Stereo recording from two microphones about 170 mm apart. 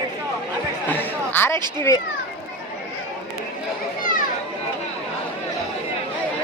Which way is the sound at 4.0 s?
50° left (ahead or behind).